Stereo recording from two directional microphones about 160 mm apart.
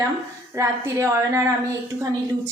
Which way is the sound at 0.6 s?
20° right (ahead or behind).